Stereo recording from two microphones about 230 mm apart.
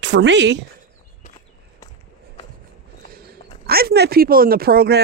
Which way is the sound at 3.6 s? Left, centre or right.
Right.